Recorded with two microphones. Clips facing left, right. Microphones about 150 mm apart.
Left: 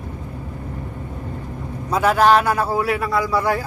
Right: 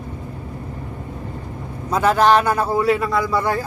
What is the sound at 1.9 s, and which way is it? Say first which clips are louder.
A man's voice: even; 10° left (ahead or behind).